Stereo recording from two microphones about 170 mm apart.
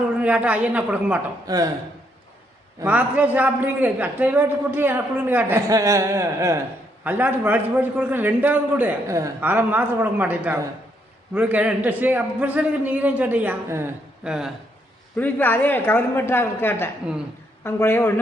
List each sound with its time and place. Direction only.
0.2 s a man's voice: 5° right (ahead or behind)
1.5 s speech: 20° right (ahead or behind)
2.8 s a man's voice: 10° right (ahead or behind)
14.3 s speech: 5° right (ahead or behind)
15.2 s a woman's voice: 10° left (ahead or behind)